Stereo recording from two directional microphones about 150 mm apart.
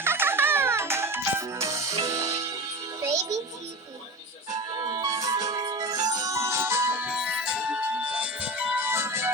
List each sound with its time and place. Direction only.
0.0 s music: 15° right (ahead or behind)
4.5 s music: 25° right (ahead or behind)